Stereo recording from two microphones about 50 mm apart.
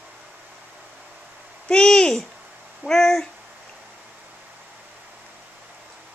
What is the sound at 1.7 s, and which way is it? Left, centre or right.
Owl, centre.